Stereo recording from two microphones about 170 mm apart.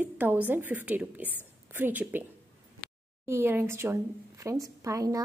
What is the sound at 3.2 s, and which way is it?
A woman's voice, 15° right (ahead or behind).